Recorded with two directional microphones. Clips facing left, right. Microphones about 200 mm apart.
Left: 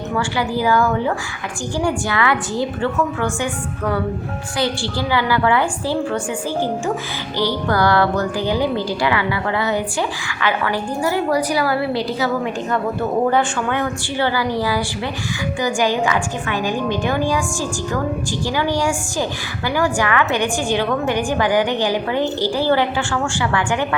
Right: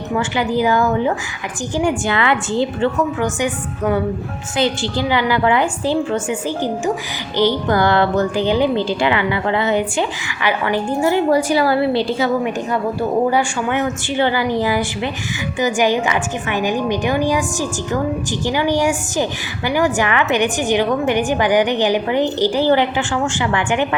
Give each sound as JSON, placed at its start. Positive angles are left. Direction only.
{"t": 0.2, "sound": "a woman's voice", "side_deg": -20}
{"t": 7.3, "sound": "a woman's voice", "side_deg": -20}
{"t": 12.7, "sound": "a woman's voice", "side_deg": -10}